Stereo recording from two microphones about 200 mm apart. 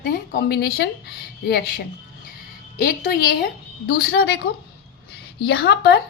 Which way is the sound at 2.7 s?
50° left (ahead or behind).